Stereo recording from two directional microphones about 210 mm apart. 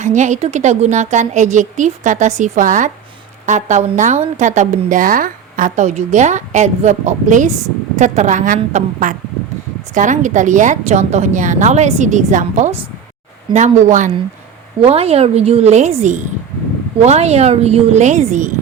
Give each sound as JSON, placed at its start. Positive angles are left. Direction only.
{"t": 0.0, "sound": "a woman's voice", "side_deg": -35}